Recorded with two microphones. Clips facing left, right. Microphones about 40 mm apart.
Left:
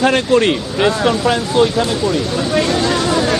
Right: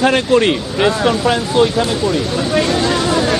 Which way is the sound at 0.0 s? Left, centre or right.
Centre.